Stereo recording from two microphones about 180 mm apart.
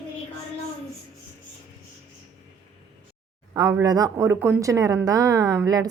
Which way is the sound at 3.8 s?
20° right (ahead or behind).